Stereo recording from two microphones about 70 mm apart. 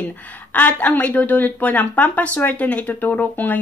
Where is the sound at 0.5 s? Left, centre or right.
Left.